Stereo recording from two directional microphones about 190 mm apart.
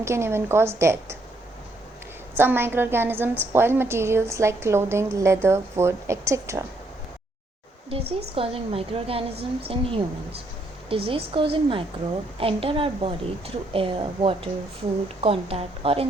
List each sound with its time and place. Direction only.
0.0 s a woman's voice: 15° right (ahead or behind)
2.3 s a woman's voice: 10° right (ahead or behind)
7.9 s a woman's voice: 30° right (ahead or behind)